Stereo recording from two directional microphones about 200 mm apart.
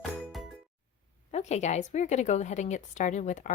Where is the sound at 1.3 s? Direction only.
35° left (ahead or behind).